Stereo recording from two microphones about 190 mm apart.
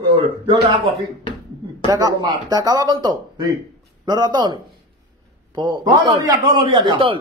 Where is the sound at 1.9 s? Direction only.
20° right (ahead or behind).